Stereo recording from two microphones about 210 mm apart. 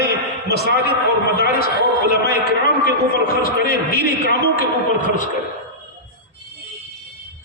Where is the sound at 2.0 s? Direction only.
55° right (ahead or behind).